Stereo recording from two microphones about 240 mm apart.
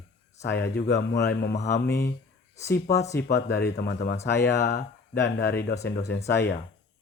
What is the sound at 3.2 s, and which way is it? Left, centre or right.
Speech, left.